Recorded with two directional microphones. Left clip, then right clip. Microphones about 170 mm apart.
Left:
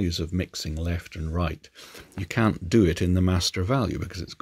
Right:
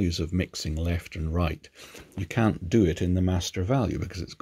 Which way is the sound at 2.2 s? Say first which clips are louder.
Left 2 dB; 10° left (ahead or behind).